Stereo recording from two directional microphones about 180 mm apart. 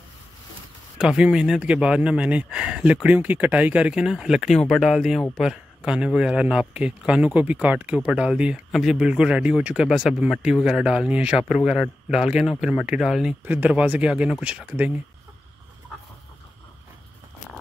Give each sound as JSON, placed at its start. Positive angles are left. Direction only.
{"t": 0.9, "sound": "speech", "side_deg": -5}
{"t": 15.9, "sound": "chicken", "side_deg": 0}